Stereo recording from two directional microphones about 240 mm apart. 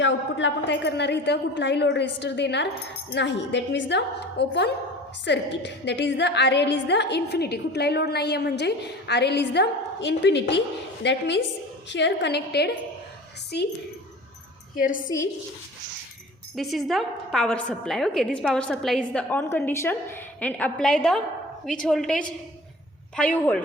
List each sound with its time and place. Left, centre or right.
0.0 s a woman's voice: left
14.8 s a woman's voice: left
16.6 s a woman's voice: centre